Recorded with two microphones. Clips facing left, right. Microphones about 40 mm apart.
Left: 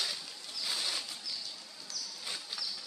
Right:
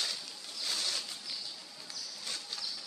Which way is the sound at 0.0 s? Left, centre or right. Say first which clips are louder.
Even; centre.